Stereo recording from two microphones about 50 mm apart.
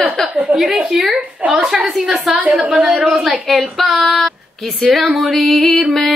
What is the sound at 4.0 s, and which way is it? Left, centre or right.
Speech, centre.